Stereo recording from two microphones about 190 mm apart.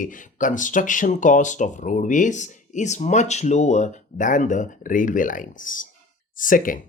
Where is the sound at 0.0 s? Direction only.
45° left (ahead or behind).